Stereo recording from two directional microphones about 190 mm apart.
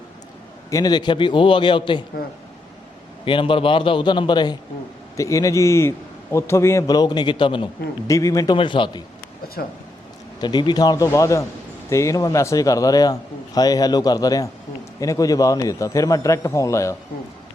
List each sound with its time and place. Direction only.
0.7 s a man's voice: 20° left (ahead or behind)
3.2 s a man's voice: 25° left (ahead or behind)
9.6 s speech: 55° left (ahead or behind)
10.4 s a man's voice: 25° left (ahead or behind)